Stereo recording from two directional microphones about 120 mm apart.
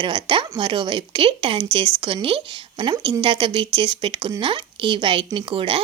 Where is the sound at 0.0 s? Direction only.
40° right (ahead or behind).